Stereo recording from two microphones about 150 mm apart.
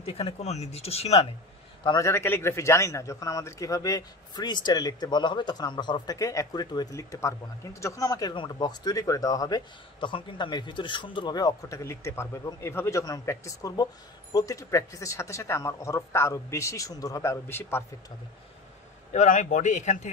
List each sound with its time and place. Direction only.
0.0 s speech: 40° left (ahead or behind)
1.9 s speech: 20° left (ahead or behind)
19.1 s speech: 55° left (ahead or behind)